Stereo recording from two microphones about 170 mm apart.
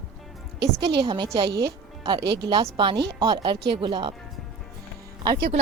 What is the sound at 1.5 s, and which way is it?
Speech, 70° right (ahead or behind).